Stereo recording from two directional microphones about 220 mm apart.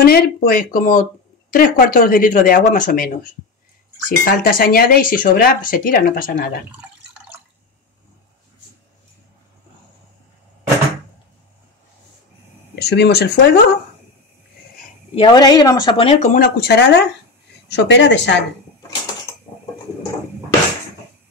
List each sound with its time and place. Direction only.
0.0 s speech: 45° left (ahead or behind)
4.2 s speech: 40° left (ahead or behind)
12.7 s speech: 50° left (ahead or behind)
15.1 s speech: 20° left (ahead or behind); by 18.4 s 55° left (ahead or behind)